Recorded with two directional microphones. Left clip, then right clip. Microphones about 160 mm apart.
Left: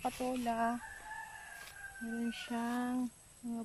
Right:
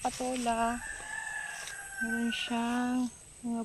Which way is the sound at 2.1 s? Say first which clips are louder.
Right 5 dB; 15° right (ahead or behind).